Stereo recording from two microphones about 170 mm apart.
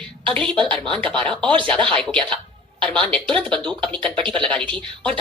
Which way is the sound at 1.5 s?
30° right (ahead or behind).